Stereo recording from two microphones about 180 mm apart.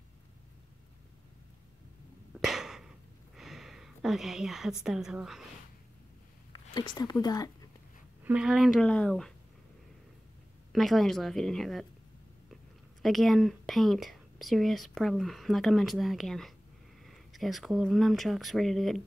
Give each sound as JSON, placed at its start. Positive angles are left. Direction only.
{"t": 2.4, "sound": "a sound", "side_deg": 0}
{"t": 4.8, "sound": "speech", "side_deg": -5}
{"t": 6.5, "sound": "speech", "side_deg": 25}
{"t": 8.2, "sound": "speech", "side_deg": -5}
{"t": 10.7, "sound": "speech", "side_deg": 0}
{"t": 13.0, "sound": "speech", "side_deg": 0}